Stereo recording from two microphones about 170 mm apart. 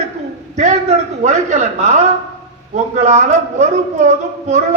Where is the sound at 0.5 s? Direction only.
45° right (ahead or behind).